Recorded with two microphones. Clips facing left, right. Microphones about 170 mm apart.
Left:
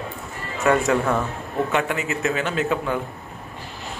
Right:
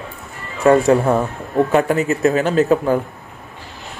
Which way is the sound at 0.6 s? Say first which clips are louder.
Right 7 dB; 30° right (ahead or behind).